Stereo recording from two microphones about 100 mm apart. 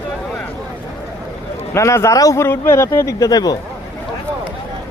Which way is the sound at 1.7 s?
30° left (ahead or behind).